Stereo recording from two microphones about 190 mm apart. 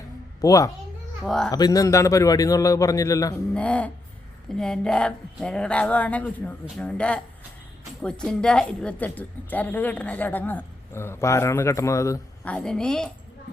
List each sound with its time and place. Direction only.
0.4 s a woman's voice: 15° left (ahead or behind)
1.2 s speech: centre (ahead or behind)
1.5 s a woman's voice: 20° left (ahead or behind)
3.5 s a woman's voice: 5° left (ahead or behind)
12.5 s speech: 5° left (ahead or behind)